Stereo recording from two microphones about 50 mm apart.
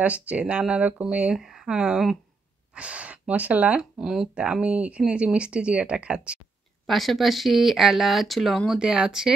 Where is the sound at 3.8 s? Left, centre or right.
Centre.